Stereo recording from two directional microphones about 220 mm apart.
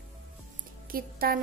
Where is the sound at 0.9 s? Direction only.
40° right (ahead or behind).